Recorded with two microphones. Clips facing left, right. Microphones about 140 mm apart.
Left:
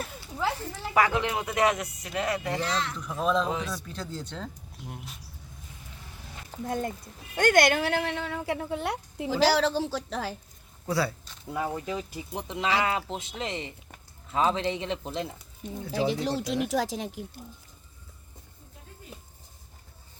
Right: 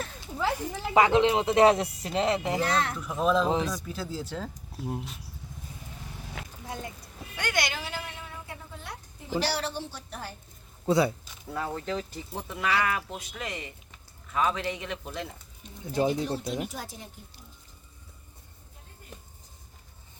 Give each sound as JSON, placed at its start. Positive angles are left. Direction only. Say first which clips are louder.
{"t": 0.2, "sound": "speech", "louder": "right 1 dB", "side_deg": -15}
{"t": 2.6, "sound": "speech", "louder": "right 3 dB", "side_deg": -55}
{"t": 3.0, "sound": "speech", "louder": "even", "side_deg": 0}
{"t": 4.8, "sound": "speech", "louder": "right 9 dB", "side_deg": -30}
{"t": 6.4, "sound": "a sound", "louder": "right 7 dB", "side_deg": -90}
{"t": 7.3, "sound": "speech", "louder": "left 10 dB", "side_deg": 50}
{"t": 10.8, "sound": "speech", "louder": "right 4 dB", "side_deg": -20}
{"t": 11.5, "sound": "speech", "louder": "left 1 dB", "side_deg": 15}
{"t": 15.9, "sound": "speech", "louder": "right 1 dB", "side_deg": 90}